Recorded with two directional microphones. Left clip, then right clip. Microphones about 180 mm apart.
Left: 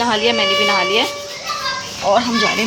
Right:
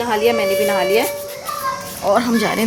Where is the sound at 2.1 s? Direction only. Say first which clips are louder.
Left 1 dB; 35° right (ahead or behind).